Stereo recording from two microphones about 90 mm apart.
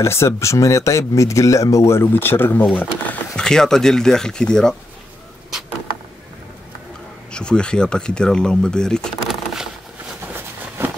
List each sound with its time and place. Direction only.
0.0 s speech: 30° left (ahead or behind)
3.4 s speech: 5° left (ahead or behind)
7.3 s speech: 10° left (ahead or behind)
10.2 s a sound: 25° right (ahead or behind)